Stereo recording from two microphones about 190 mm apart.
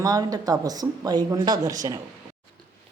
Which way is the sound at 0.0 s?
20° right (ahead or behind).